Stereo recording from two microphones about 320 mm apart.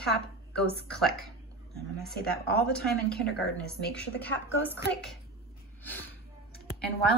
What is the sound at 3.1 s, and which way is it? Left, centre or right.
Speech, left.